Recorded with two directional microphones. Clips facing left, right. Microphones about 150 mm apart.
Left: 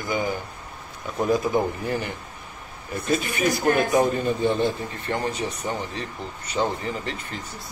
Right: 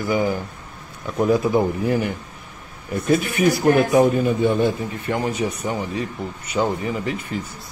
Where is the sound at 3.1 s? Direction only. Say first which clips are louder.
Right 5 dB; 65° right (ahead or behind).